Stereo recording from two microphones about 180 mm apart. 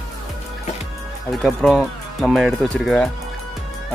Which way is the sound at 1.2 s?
Centre (ahead or behind).